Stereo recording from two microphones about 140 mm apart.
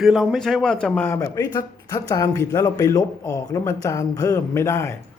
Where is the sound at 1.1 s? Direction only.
20° left (ahead or behind).